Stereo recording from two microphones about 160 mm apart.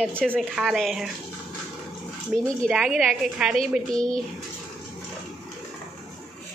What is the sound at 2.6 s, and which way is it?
Speech, 5° right (ahead or behind).